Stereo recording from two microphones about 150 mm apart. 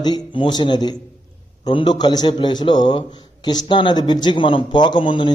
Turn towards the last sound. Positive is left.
turn(degrees=35)  # may be behind; listen again after turning